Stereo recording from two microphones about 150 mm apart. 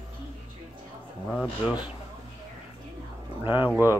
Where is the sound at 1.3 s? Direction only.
5° left (ahead or behind).